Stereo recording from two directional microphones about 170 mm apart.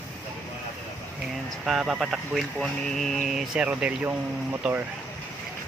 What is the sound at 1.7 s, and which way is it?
Speech, 5° right (ahead or behind).